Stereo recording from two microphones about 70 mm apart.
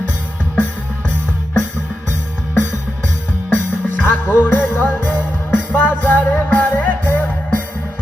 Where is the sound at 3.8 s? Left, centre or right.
Left.